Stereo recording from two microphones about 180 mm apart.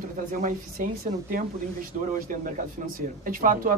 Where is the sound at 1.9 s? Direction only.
45° right (ahead or behind).